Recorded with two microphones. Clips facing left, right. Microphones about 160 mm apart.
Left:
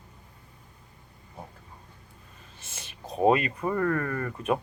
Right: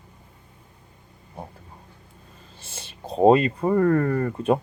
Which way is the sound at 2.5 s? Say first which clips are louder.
Right 5 dB; 30° right (ahead or behind).